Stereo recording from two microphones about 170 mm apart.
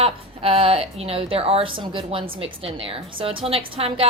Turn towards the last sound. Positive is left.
turn(degrees=-35)  # may be behind; listen again after turning